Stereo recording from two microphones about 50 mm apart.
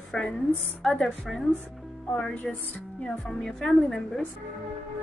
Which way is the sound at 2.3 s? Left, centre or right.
Left.